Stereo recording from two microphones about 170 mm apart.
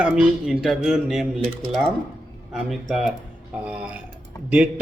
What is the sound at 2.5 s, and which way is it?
Speech, centre (ahead or behind).